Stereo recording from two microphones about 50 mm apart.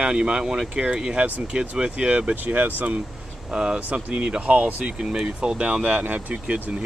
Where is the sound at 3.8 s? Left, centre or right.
Right.